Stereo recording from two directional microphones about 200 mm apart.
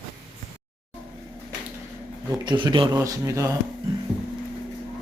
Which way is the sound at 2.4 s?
20° right (ahead or behind).